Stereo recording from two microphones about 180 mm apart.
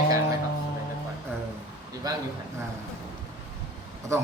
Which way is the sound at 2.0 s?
20° right (ahead or behind).